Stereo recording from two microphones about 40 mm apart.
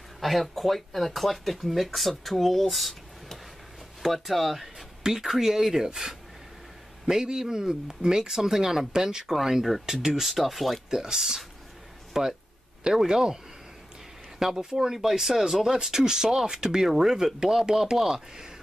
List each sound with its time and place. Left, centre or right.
0.2 s speech: centre
10.9 s speech: centre
14.4 s speech: centre
18.1 s speech: centre